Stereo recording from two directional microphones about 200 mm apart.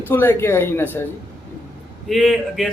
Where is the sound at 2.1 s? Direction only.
Centre (ahead or behind).